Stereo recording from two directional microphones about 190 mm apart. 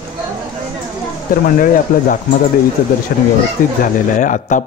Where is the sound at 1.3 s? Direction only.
45° left (ahead or behind).